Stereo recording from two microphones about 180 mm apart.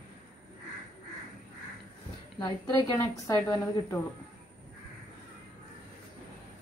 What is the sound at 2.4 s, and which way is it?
A woman's voice, 20° left (ahead or behind).